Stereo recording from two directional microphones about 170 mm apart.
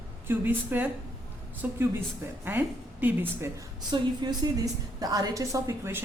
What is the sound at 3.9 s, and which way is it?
A woman's voice, 25° right (ahead or behind).